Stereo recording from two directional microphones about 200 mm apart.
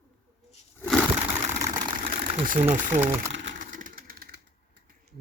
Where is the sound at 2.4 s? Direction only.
40° right (ahead or behind).